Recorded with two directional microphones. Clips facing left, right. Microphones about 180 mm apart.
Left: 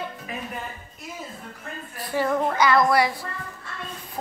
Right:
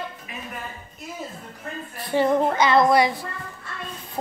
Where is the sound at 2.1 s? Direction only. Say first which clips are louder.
Right 4 dB; 25° right (ahead or behind).